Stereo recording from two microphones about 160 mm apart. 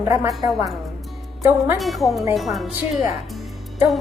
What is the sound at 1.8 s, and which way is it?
Speech, centre (ahead or behind).